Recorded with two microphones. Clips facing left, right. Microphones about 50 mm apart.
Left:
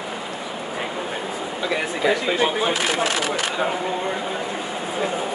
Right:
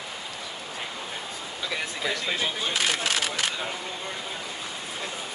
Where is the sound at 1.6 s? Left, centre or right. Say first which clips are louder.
Left 8 dB; left.